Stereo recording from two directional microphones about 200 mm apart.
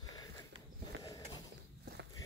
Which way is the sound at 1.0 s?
15° left (ahead or behind).